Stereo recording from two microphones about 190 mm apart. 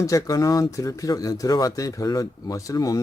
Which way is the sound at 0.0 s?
15° left (ahead or behind).